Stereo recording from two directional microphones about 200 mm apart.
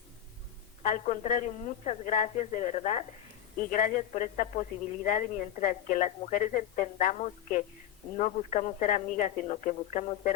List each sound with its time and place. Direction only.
0.8 s a woman's voice: 40° left (ahead or behind)